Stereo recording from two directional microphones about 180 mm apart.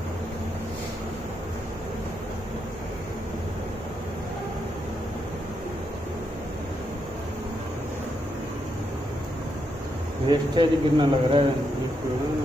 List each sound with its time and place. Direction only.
10.2 s speech: 25° right (ahead or behind)